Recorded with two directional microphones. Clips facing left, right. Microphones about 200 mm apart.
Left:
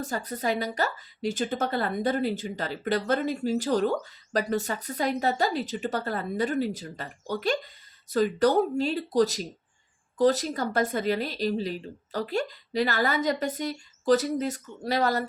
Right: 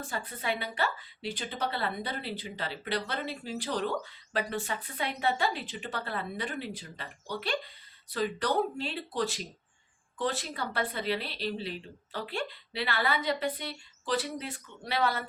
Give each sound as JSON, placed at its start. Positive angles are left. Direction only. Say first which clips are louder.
{"t": 0.0, "sound": "speech", "louder": "left 6 dB", "side_deg": 40}